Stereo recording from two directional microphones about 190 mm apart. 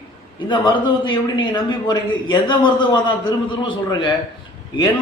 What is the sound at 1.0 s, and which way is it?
A man's voice, 25° left (ahead or behind).